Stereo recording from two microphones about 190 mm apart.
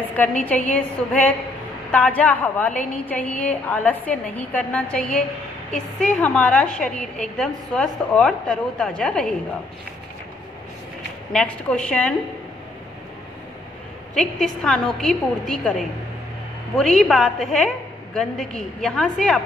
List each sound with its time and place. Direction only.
0.1 s a woman's voice: 5° left (ahead or behind)
11.3 s a woman's voice: 5° left (ahead or behind)
14.1 s a woman's voice: 5° left (ahead or behind)